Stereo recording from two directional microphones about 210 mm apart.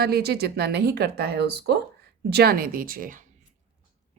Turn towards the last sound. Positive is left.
turn(degrees=-40)  # may be behind; listen again after turning